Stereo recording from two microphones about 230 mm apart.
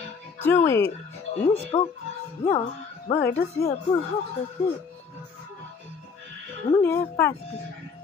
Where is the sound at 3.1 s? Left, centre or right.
Centre.